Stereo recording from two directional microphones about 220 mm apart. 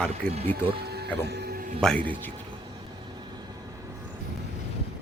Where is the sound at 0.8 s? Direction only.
45° right (ahead or behind).